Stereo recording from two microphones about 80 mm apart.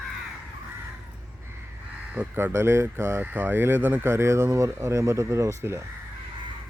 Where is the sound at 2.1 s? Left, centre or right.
Right.